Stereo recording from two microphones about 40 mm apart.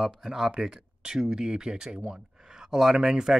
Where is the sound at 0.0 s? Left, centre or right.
Centre.